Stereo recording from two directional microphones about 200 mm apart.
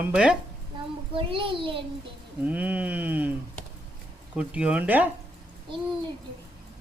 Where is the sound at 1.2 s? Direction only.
25° right (ahead or behind).